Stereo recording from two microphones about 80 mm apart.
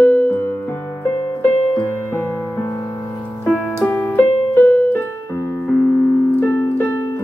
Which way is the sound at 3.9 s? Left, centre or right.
Left.